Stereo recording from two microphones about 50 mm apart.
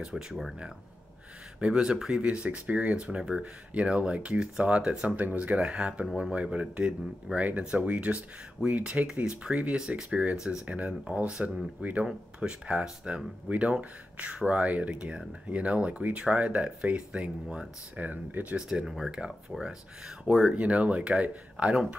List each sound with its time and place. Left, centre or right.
0.0 s speech: centre
1.6 s speech: centre
2.2 s speech: right
18.7 s speech: centre
20.2 s speech: centre
20.5 s speech: right